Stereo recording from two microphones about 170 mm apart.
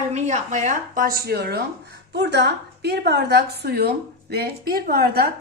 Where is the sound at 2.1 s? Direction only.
85° right.